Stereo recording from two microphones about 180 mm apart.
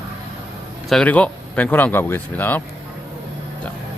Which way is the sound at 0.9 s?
5° left (ahead or behind).